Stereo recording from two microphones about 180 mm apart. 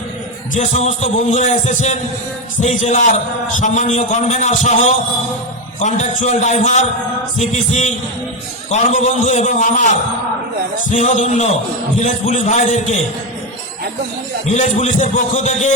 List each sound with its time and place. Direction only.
0.5 s a man's voice: 40° left (ahead or behind)
14.5 s a man's voice: 40° left (ahead or behind)